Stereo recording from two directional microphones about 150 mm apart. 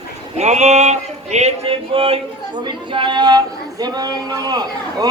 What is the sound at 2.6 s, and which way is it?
Speech, 35° right (ahead or behind).